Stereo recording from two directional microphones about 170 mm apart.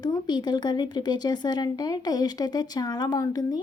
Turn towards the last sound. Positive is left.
turn(degrees=25)  # may be behind; listen again after turning